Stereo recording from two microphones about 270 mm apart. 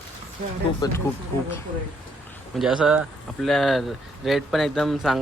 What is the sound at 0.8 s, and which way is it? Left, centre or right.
Speech, centre.